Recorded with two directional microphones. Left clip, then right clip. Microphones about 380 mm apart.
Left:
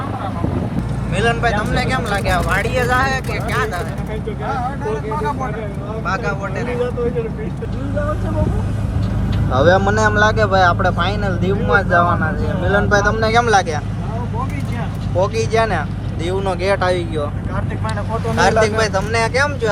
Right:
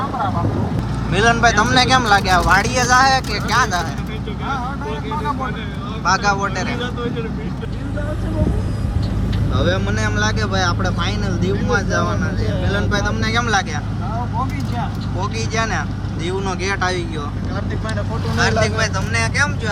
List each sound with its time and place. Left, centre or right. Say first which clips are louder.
1.1 s speech: right 3 dB; centre
6.1 s speech: right 5 dB; centre
9.5 s speech: left 8 dB; centre
15.2 s speech: left 6 dB; centre
18.3 s speech: left 4 dB; centre